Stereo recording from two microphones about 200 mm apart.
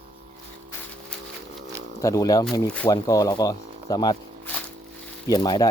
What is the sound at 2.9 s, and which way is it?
Speech, 15° left (ahead or behind).